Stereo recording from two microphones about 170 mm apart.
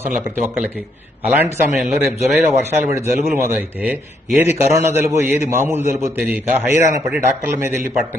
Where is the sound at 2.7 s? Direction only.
15° right (ahead or behind).